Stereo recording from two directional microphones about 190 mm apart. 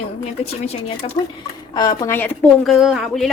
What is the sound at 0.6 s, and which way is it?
Speech, 35° left (ahead or behind).